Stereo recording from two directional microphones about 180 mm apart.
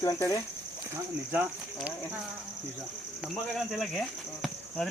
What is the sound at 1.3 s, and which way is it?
Speech, 10° right (ahead or behind).